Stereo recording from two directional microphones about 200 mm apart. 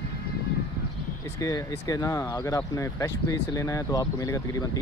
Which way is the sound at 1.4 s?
15° left (ahead or behind).